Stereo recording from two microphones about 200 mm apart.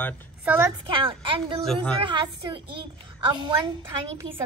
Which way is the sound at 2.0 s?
20° right (ahead or behind).